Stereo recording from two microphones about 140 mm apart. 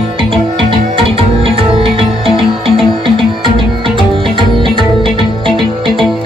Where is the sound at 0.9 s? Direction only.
40° right (ahead or behind).